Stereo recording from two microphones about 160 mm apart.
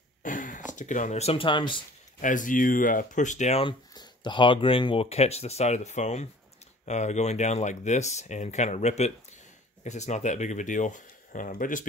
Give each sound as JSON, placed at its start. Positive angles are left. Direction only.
{"t": 0.2, "sound": "speech", "side_deg": 55}
{"t": 2.2, "sound": "speech", "side_deg": 55}
{"t": 3.6, "sound": "speech", "side_deg": 25}